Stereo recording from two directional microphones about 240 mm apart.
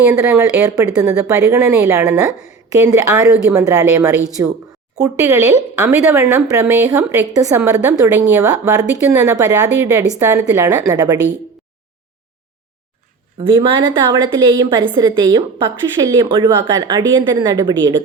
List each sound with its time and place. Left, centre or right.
0.1 s speech: centre
13.4 s a woman's voice: centre